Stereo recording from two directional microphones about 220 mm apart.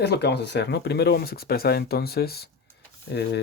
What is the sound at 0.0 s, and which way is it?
Speech, 50° left (ahead or behind).